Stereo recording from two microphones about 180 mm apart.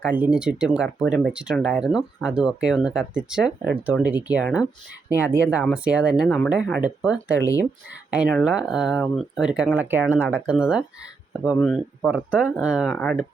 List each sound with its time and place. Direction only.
0.0 s speech: 5° right (ahead or behind)